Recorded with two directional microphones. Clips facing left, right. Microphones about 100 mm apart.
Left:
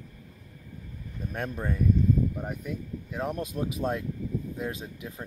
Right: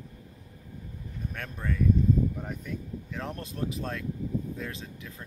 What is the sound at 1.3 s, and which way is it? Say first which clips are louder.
Speech: left 4 dB; 20° left (ahead or behind).